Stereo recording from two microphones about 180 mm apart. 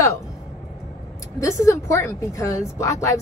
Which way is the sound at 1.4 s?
15° left (ahead or behind).